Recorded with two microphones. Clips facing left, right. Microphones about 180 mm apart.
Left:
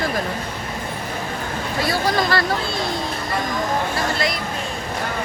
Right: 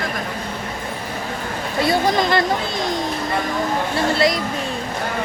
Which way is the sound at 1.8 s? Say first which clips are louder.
Right 3 dB; 20° right (ahead or behind).